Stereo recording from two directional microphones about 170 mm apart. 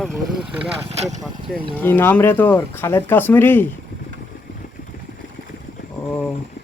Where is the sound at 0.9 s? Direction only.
40° right (ahead or behind).